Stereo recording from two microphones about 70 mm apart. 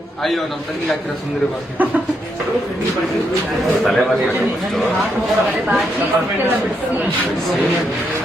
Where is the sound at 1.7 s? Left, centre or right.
Right.